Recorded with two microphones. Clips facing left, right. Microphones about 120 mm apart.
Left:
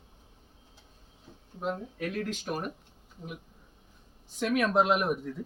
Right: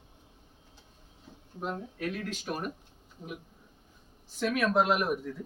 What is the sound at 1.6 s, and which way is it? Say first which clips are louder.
Speech: left 1 dB; centre (ahead or behind).